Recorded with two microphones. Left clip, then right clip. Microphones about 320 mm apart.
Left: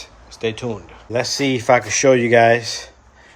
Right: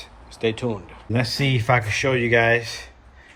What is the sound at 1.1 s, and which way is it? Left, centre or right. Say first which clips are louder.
Speech: left 4 dB; centre.